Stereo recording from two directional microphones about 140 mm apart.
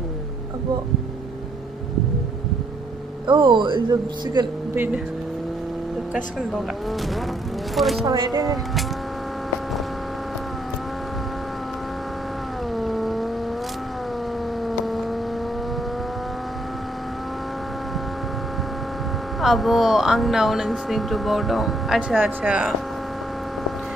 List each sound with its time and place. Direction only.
3.3 s speech: 35° right (ahead or behind)
4.7 s speech: 15° right (ahead or behind)
7.7 s speech: centre (ahead or behind)
8.0 s speech: 30° right (ahead or behind)
12.7 s vehicle: centre (ahead or behind)
14.7 s vehicle: centre (ahead or behind)
19.4 s speech: centre (ahead or behind)